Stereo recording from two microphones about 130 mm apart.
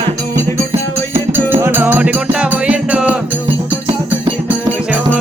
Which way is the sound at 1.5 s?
15° right (ahead or behind).